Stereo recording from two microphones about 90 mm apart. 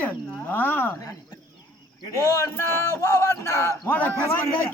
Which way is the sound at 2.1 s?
35° left (ahead or behind).